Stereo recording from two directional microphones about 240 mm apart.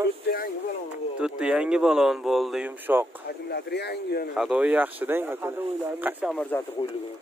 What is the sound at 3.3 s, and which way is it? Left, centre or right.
Speech, left.